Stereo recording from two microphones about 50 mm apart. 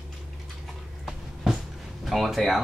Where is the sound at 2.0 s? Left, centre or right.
Centre.